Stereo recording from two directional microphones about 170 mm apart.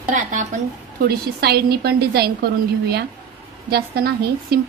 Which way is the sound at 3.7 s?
65° right (ahead or behind).